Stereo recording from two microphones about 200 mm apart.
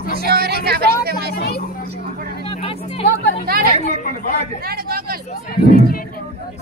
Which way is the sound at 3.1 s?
55° left (ahead or behind).